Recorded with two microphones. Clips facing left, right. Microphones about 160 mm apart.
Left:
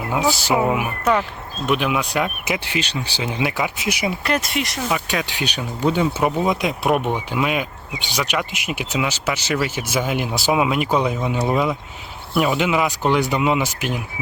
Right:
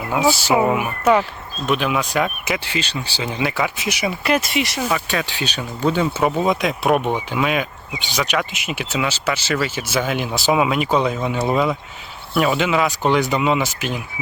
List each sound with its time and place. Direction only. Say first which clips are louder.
0.4 s speech: right 2 dB; 5° right (ahead or behind); by 4.1 s 15° left (ahead or behind)
4.2 s speech: right 3 dB; 5° right (ahead or behind)
5.1 s speech: even; 15° left (ahead or behind)